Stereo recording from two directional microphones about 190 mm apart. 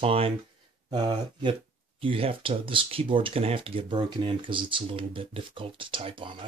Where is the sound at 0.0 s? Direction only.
30° right (ahead or behind).